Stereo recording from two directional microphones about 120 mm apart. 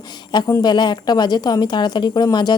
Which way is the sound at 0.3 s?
40° left (ahead or behind).